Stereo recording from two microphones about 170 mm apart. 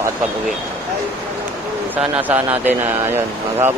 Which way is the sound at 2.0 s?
10° right (ahead or behind).